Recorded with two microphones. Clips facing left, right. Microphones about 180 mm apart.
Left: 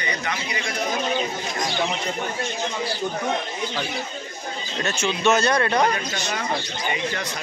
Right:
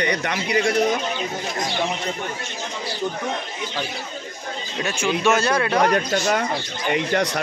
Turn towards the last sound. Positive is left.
turn(degrees=-75)  # may be behind; listen again after turning